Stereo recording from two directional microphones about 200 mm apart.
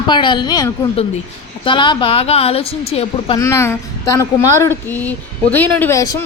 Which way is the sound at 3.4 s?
15° left (ahead or behind).